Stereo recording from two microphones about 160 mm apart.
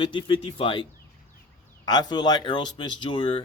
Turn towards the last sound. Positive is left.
turn(degrees=35)  # may be behind; listen again after turning